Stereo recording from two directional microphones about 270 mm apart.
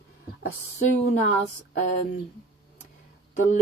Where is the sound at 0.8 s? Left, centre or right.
Left.